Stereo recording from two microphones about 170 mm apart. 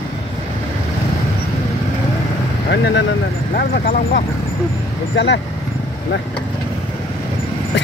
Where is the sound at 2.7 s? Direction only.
90° left.